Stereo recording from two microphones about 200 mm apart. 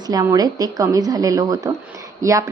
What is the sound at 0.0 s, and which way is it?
A woman's voice, 20° right (ahead or behind).